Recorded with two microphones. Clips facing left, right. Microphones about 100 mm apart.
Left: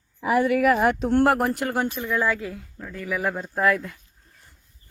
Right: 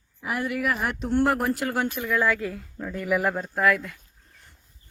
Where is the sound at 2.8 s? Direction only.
15° right (ahead or behind).